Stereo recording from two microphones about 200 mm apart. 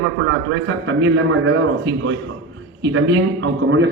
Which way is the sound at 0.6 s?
65° right (ahead or behind).